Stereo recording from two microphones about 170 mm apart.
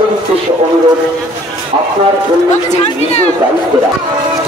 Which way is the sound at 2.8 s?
40° left (ahead or behind).